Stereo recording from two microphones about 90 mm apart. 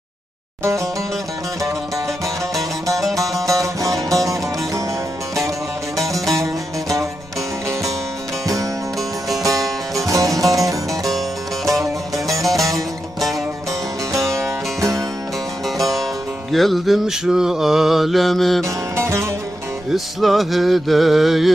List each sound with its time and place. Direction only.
0.6 s music: 35° right (ahead or behind)
3.4 s music: 35° right (ahead or behind)
9.4 s music: 40° right (ahead or behind)
9.6 s music: centre (ahead or behind)
10.1 s music: 40° right (ahead or behind)
14.3 s music: 35° right (ahead or behind)
15.6 s music: centre (ahead or behind)
16.5 s mantra: centre (ahead or behind)
18.6 s music: 35° right (ahead or behind)
19.9 s mantra: centre (ahead or behind)